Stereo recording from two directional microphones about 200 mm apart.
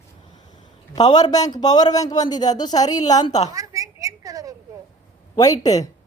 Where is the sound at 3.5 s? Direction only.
15° right (ahead or behind).